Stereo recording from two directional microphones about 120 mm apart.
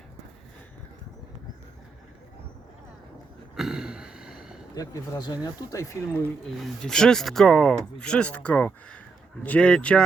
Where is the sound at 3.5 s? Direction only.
5° right (ahead or behind).